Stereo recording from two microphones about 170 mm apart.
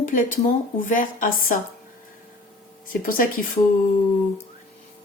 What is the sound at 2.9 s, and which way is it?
Speech, 55° left (ahead or behind).